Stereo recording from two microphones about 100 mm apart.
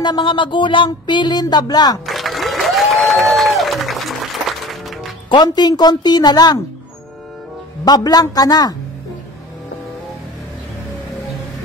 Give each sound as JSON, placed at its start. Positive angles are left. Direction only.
{"t": 0.0, "sound": "speech", "side_deg": 50}
{"t": 2.0, "sound": "applause", "side_deg": 0}
{"t": 5.3, "sound": "speech", "side_deg": 45}
{"t": 7.8, "sound": "a man's voice", "side_deg": 40}